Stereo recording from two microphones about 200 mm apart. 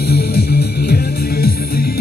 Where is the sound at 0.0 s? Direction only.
50° left (ahead or behind).